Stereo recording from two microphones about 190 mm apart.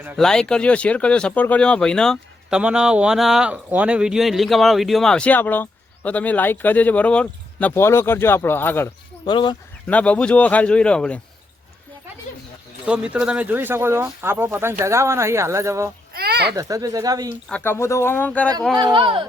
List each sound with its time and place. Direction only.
0.2 s speech: 5° left (ahead or behind)
9.2 s speech: 25° left (ahead or behind)
9.8 s speech: 5° left (ahead or behind)
12.8 s speech: 5° right (ahead or behind)
16.1 s a sound: 55° right (ahead or behind)
16.6 s speech: 15° right (ahead or behind)
17.5 s speech: 10° left (ahead or behind)
18.8 s speech: 25° right (ahead or behind)